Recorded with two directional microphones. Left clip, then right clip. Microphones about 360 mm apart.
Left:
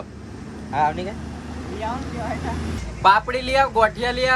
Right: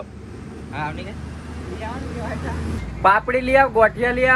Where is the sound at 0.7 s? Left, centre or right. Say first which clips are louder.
Left 8 dB; left.